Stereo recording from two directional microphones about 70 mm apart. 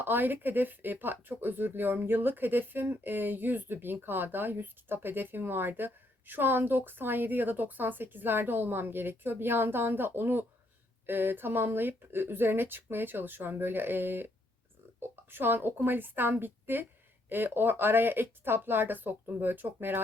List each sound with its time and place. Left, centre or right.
0.0 s speech: right
15.3 s a woman's voice: right